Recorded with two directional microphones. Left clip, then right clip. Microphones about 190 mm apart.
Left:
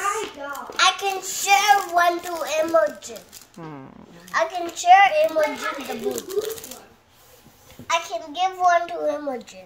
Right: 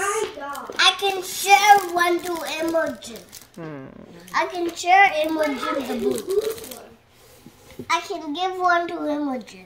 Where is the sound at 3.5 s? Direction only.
10° left (ahead or behind).